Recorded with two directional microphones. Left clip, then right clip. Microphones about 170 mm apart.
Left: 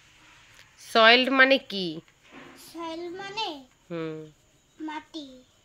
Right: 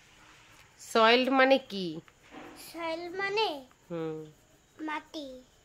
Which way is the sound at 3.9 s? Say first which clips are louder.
Left 2 dB; centre (ahead or behind).